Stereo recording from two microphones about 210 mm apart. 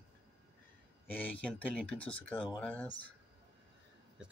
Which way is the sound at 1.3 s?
5° left (ahead or behind).